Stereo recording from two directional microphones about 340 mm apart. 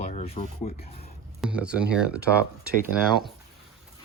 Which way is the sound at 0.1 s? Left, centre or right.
Centre.